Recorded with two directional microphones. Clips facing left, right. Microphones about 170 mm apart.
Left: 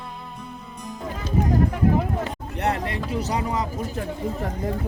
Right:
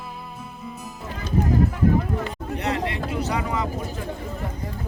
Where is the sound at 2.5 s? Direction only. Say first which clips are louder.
Left 1 dB; 55° left (ahead or behind); by 3.6 s 35° left (ahead or behind).